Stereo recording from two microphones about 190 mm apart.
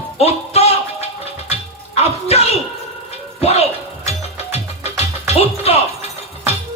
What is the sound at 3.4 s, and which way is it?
Music, 35° left (ahead or behind).